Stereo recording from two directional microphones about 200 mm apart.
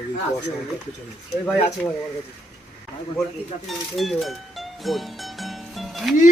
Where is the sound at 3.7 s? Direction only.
Centre (ahead or behind).